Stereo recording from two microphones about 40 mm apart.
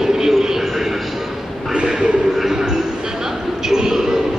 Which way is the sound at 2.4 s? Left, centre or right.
Centre.